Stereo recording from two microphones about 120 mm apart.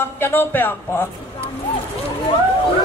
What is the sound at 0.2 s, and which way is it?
Speech, 15° left (ahead or behind).